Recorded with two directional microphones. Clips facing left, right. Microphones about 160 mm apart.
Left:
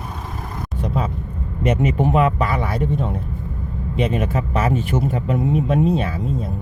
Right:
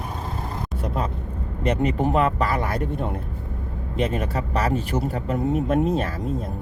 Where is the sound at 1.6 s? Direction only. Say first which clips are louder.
Left 3 dB; 5° left (ahead or behind).